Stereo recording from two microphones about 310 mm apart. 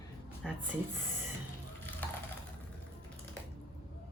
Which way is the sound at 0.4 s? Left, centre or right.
Centre.